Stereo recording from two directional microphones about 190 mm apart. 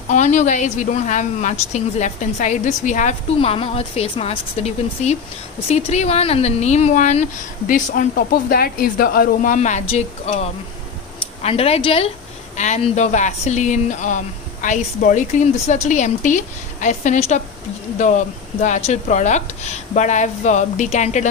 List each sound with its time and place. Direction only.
0.1 s speech: 40° left (ahead or behind)
3.3 s speech: 30° left (ahead or behind)